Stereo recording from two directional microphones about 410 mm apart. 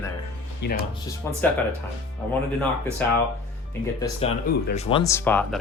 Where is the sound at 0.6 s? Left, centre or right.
Left.